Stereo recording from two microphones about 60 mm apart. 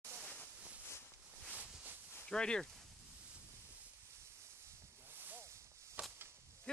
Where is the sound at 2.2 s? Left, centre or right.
Centre.